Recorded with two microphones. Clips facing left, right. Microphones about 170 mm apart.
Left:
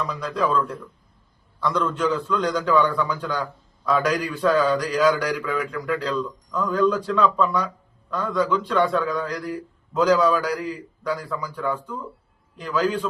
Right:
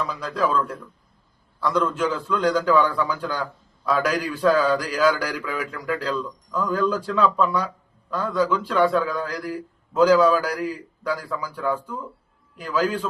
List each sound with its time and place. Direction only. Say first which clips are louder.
0.1 s speech: even; centre (ahead or behind)
1.6 s speech: even; 5° right (ahead or behind)